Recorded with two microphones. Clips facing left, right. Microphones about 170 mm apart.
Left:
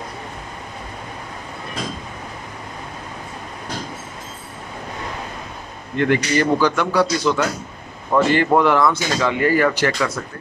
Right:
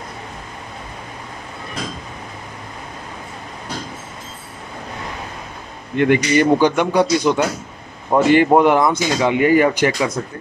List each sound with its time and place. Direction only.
5.9 s a man's voice: 15° right (ahead or behind)